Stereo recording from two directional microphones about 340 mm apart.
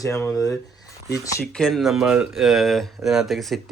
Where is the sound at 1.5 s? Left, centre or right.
Centre.